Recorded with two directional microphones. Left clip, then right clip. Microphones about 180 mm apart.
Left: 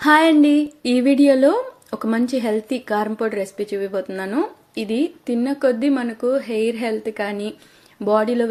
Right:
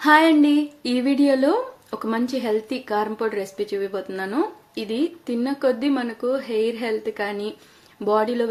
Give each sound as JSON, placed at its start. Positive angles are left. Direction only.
{"t": 0.0, "sound": "speech", "side_deg": 20}